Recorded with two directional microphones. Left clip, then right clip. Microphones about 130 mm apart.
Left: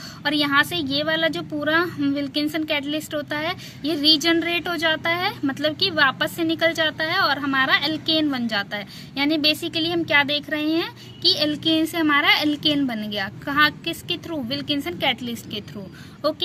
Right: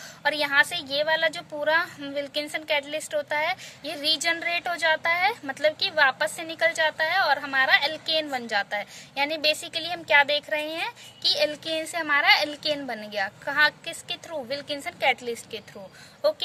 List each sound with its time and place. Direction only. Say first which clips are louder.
0.2 s a woman's voice: left 2 dB; 50° right (ahead or behind)